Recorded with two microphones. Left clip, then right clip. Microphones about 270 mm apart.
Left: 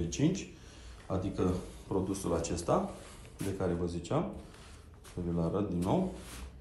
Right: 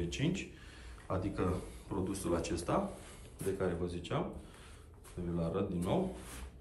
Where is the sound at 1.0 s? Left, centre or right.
Centre.